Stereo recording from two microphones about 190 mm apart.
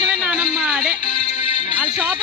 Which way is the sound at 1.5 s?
30° left (ahead or behind).